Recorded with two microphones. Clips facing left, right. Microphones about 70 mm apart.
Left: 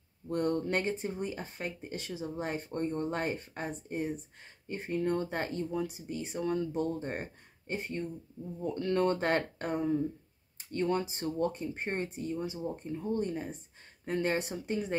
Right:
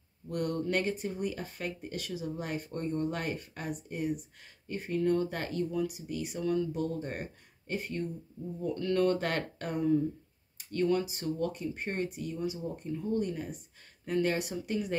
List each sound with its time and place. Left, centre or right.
0.3 s speech: left